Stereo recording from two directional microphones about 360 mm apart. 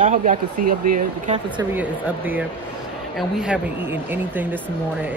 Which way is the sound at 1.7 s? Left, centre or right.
Centre.